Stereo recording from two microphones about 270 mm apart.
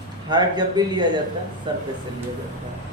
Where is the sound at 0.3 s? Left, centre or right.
Centre.